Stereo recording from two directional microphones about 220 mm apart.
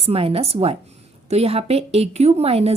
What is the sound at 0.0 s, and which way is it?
A woman's voice, 25° right (ahead or behind).